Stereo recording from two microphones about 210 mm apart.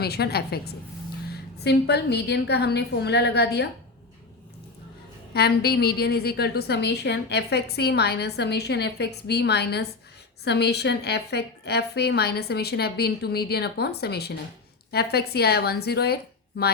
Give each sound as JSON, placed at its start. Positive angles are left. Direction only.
{"t": 0.0, "sound": "a woman's voice", "side_deg": 50}
{"t": 5.3, "sound": "a woman's voice", "side_deg": 50}